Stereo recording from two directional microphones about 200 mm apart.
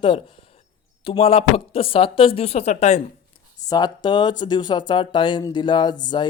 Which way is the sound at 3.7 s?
20° left (ahead or behind).